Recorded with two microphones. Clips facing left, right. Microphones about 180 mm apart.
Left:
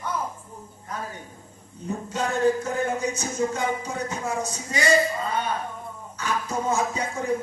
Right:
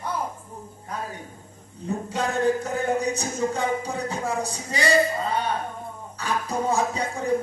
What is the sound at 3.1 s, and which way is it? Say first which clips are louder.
Speech: even; 35° right (ahead or behind).